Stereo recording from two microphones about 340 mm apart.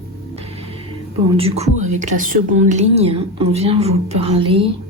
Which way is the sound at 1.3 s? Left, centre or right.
Centre.